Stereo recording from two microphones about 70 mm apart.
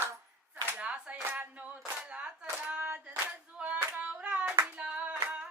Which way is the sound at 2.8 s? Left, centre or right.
Right.